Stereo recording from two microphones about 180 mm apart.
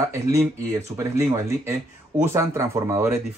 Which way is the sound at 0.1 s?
15° right (ahead or behind).